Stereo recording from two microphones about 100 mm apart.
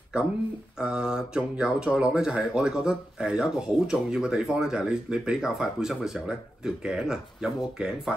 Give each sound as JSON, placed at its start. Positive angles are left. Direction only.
{"t": 0.7, "sound": "speech", "side_deg": -5}